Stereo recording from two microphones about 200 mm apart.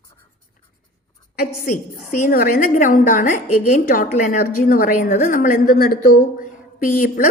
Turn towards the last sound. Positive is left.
turn(degrees=45)  # may be behind; listen again after turning